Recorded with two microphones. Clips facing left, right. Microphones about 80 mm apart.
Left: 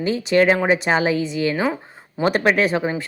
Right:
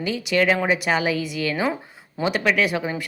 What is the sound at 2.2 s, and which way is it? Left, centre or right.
Speech, left.